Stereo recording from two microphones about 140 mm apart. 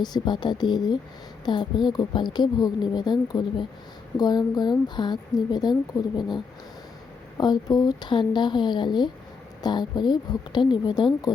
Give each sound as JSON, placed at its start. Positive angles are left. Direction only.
{"t": 0.0, "sound": "a woman's voice", "side_deg": 30}